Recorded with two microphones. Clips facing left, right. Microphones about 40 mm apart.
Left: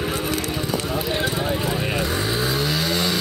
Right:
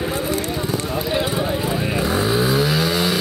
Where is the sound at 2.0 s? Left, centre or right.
Centre.